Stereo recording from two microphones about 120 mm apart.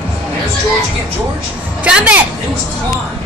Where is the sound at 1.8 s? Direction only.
10° right (ahead or behind).